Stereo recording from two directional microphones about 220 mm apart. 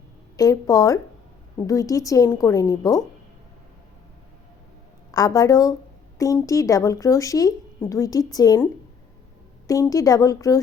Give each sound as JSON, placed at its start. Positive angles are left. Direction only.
{"t": 0.3, "sound": "speech", "side_deg": 15}
{"t": 5.1, "sound": "speech", "side_deg": 15}
{"t": 9.6, "sound": "speech", "side_deg": 15}